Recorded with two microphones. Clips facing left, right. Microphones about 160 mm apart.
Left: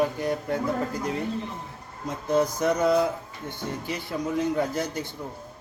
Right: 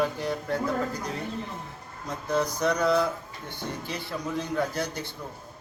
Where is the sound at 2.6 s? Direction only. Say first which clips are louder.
Even; 20° left (ahead or behind).